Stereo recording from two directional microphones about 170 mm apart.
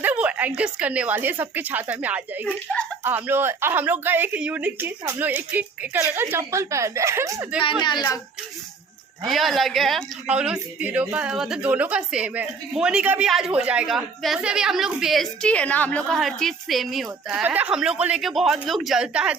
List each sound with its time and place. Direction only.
0.0 s a woman's voice: 5° right (ahead or behind)
7.6 s speech: 30° left (ahead or behind)
9.2 s a woman's voice: centre (ahead or behind)